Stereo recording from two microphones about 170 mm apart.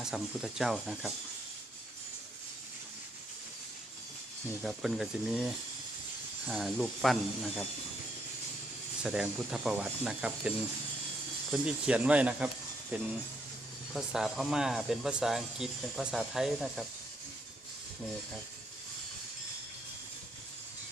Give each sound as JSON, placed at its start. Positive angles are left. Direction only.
{"t": 0.0, "sound": "speech", "side_deg": 0}
{"t": 4.6, "sound": "speech", "side_deg": 0}
{"t": 6.5, "sound": "speech", "side_deg": 0}
{"t": 9.0, "sound": "speech", "side_deg": -5}
{"t": 11.5, "sound": "speech", "side_deg": -5}